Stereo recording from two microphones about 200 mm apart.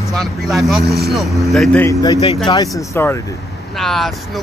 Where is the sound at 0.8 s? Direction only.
50° right (ahead or behind).